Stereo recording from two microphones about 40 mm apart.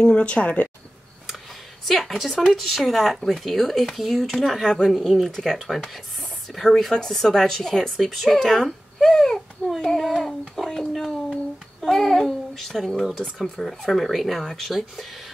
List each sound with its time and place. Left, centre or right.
0.0 s speech: left
1.9 s speech: centre
4.6 s a woman's voice: centre
5.0 s a woman's voice: centre